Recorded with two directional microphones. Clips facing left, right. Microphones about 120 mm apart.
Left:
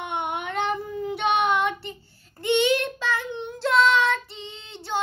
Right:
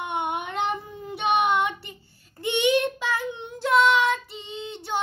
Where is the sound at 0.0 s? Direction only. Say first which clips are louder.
Right 1 dB; 15° right (ahead or behind).